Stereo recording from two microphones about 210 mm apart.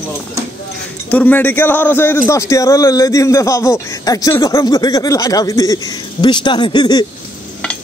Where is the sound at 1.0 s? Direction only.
5° left (ahead or behind).